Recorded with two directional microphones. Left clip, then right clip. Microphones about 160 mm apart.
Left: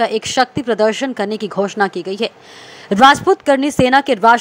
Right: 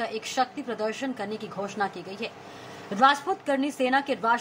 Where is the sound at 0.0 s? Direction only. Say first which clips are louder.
Left 12 dB; 55° left (ahead or behind).